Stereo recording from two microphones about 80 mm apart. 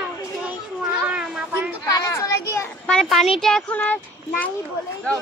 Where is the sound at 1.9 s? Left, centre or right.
Left.